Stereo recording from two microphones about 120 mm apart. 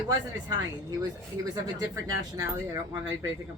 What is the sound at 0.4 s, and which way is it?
Speech, 30° right (ahead or behind).